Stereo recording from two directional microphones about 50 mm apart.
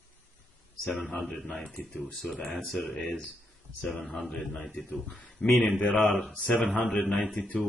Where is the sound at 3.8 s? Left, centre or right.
Left.